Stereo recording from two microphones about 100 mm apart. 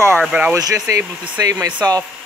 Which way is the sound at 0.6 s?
35° right (ahead or behind).